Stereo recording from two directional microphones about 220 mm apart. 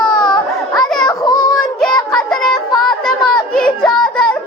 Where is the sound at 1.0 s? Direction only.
20° left (ahead or behind).